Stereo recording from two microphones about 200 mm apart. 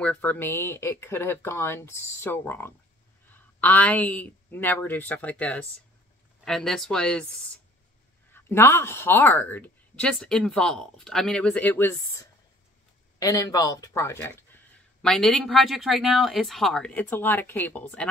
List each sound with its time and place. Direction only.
0.0 s speech: 5° left (ahead or behind)
8.3 s speech: 10° left (ahead or behind)